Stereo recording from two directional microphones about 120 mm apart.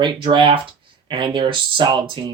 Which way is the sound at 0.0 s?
40° right (ahead or behind).